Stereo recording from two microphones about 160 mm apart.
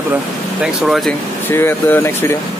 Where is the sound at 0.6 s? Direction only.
Centre (ahead or behind).